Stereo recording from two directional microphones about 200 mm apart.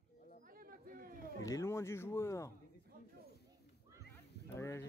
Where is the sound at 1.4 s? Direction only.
15° left (ahead or behind).